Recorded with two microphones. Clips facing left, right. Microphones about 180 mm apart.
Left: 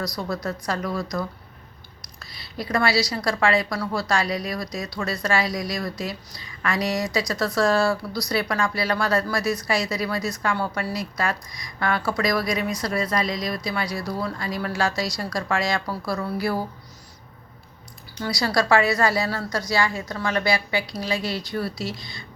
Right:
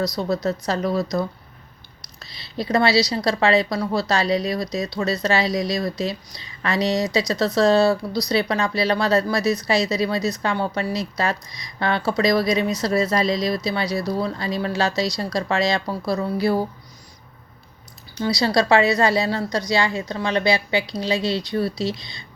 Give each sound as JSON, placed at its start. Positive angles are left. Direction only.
{"t": 0.0, "sound": "a woman's voice", "side_deg": -20}
{"t": 2.1, "sound": "a woman's voice", "side_deg": -25}
{"t": 18.2, "sound": "a woman's voice", "side_deg": -20}